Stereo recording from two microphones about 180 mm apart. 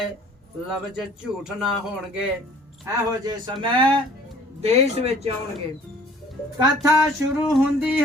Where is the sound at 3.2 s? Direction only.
25° right (ahead or behind).